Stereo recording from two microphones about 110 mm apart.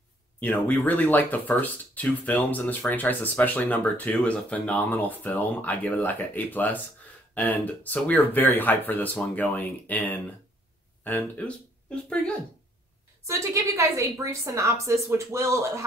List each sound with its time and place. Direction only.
0.4 s speech: 15° left (ahead or behind)
13.3 s a woman's voice: 30° right (ahead or behind)